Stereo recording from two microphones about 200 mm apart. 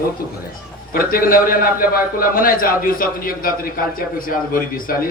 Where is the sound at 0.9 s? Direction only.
45° left (ahead or behind).